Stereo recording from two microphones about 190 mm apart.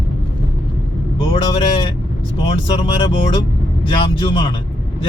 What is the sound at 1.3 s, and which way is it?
Speech, 30° left (ahead or behind).